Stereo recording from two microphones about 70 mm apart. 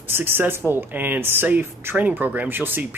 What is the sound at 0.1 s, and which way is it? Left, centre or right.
Speech, right.